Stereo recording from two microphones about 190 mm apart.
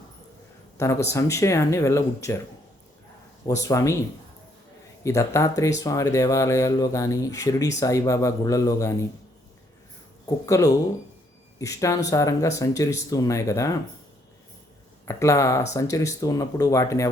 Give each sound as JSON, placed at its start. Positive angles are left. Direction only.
{"t": 0.8, "sound": "speech", "side_deg": 15}
{"t": 3.4, "sound": "speech", "side_deg": 15}
{"t": 5.0, "sound": "speech", "side_deg": 15}
{"t": 10.2, "sound": "speech", "side_deg": 15}
{"t": 15.0, "sound": "speech", "side_deg": 15}